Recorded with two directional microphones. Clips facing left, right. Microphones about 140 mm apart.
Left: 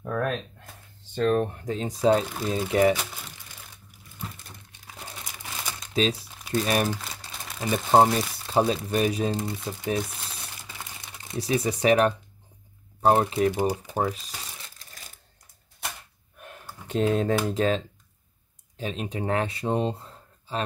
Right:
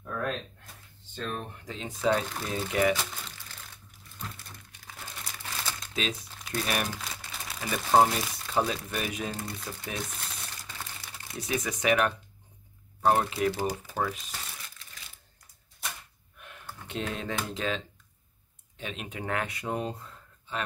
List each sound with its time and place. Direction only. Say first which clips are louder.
0.0 s a sound: left 6 dB; 55° left (ahead or behind)
1.1 s speech: left 13 dB; 60° left (ahead or behind); by 2.2 s 35° left (ahead or behind)
2.2 s speech: left 6 dB; 10° left (ahead or behind)
2.5 s speech: left 5 dB; 35° left (ahead or behind)
2.9 s crumpling: left 3 dB; 10° left (ahead or behind)
5.9 s speech: left 9 dB; 35° left (ahead or behind)
10.8 s crumpling: left 1 dB; 20° left (ahead or behind)
11.3 s speech: left 6 dB; 35° left (ahead or behind); by 14.0 s 20° left (ahead or behind)
14.0 s speech: left 4 dB; 35° left (ahead or behind)
14.8 s a sound: left 2 dB; 40° left (ahead or behind)
16.3 s a sound: left 5 dB; 40° left (ahead or behind)
16.8 s speech: left 11 dB; 40° left (ahead or behind)